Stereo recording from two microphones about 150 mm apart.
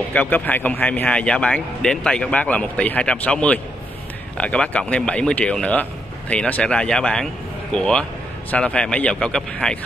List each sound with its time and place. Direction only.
0.1 s speech: 10° left (ahead or behind)